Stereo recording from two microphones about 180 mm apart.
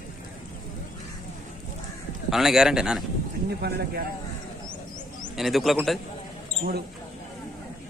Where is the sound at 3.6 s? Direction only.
65° right (ahead or behind).